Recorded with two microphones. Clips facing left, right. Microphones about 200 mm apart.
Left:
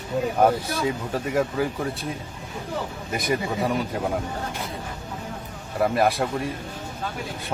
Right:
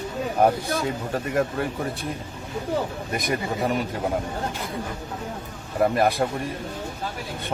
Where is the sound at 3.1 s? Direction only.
Centre (ahead or behind).